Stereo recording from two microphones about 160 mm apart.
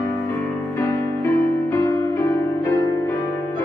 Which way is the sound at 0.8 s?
15° left (ahead or behind).